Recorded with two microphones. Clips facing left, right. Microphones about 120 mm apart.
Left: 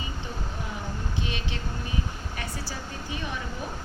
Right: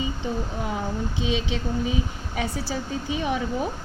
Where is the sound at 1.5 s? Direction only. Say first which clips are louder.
Right 8 dB; 90° right.